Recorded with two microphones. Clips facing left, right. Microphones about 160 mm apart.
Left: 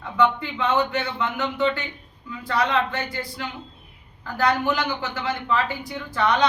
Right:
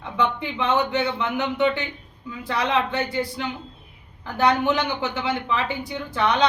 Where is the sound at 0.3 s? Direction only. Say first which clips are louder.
Even; 20° right (ahead or behind).